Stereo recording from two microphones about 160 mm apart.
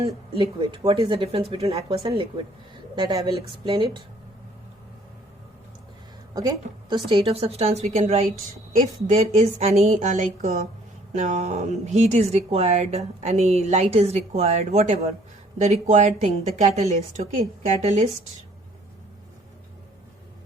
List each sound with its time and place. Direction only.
0.6 s a woman's voice: 35° right (ahead or behind)
6.3 s a woman's voice: 20° right (ahead or behind)
7.1 s a woman's voice: 40° right (ahead or behind)